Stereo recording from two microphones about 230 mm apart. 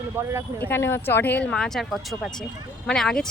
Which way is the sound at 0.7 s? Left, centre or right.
Centre.